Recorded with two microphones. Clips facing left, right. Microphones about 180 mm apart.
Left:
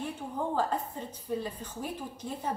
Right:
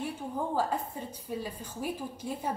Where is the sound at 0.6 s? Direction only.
10° right (ahead or behind).